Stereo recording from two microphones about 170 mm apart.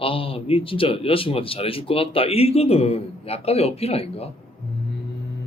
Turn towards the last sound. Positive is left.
turn(degrees=35)  # may be behind; listen again after turning